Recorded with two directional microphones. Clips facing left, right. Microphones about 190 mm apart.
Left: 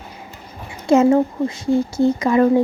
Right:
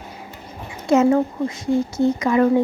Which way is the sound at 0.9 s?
30° left (ahead or behind).